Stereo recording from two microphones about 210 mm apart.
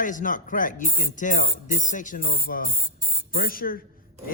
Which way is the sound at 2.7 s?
10° left (ahead or behind).